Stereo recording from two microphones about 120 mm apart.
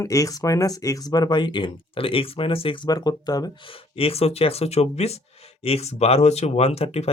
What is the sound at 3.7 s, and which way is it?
Speech, 50° left (ahead or behind).